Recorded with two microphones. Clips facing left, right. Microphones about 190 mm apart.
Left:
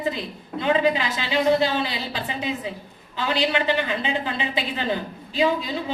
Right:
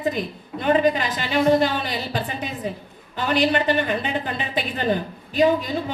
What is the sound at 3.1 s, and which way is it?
A woman's voice, 55° right (ahead or behind).